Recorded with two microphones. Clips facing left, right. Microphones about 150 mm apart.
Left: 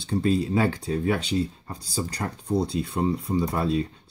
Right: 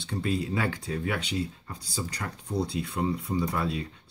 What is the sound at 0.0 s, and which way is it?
Speech, 35° left (ahead or behind).